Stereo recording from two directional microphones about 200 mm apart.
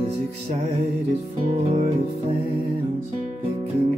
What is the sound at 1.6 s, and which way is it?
Music, 35° right (ahead or behind).